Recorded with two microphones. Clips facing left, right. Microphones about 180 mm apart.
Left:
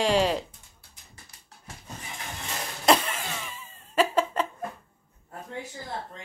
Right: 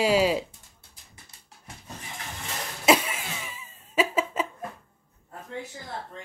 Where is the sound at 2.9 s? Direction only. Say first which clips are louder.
Even; 5° right (ahead or behind).